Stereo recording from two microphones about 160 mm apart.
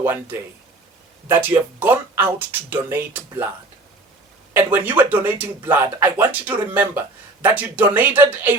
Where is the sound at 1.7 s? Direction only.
10° right (ahead or behind).